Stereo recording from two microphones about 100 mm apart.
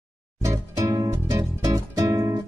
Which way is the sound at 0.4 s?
35° right (ahead or behind).